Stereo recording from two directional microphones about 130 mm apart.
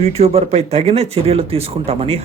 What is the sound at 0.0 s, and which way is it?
Speech, 55° right (ahead or behind).